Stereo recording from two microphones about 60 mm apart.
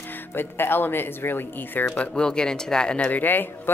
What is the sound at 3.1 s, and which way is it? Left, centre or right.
Speech, left.